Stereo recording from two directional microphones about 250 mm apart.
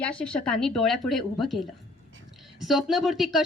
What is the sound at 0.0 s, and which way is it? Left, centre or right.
A woman's voice, centre.